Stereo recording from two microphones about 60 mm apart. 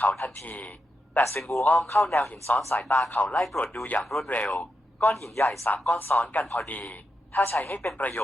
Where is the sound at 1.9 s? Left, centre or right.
Left.